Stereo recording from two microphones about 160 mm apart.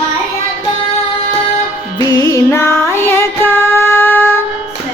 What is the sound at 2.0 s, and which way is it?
Music, 25° left (ahead or behind).